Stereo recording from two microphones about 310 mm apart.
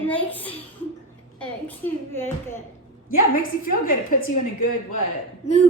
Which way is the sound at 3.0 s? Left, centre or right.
Left.